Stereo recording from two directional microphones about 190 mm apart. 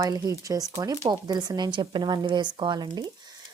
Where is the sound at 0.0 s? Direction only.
15° right (ahead or behind).